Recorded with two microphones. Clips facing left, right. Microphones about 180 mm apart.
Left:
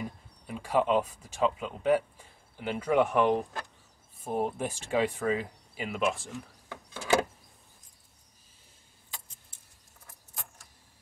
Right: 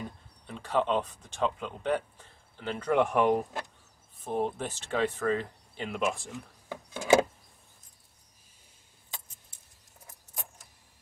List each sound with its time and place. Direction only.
0.0 s speech: 10° left (ahead or behind)
4.2 s speech: 10° left (ahead or behind)
6.7 s wood: 15° right (ahead or behind)